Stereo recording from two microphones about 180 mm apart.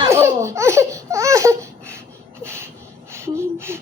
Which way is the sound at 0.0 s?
15° right (ahead or behind).